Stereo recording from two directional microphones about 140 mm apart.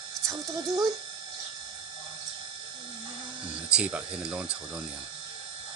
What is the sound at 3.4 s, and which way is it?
Speech, 10° right (ahead or behind).